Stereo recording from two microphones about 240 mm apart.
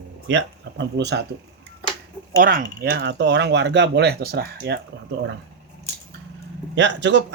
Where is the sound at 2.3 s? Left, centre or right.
Right.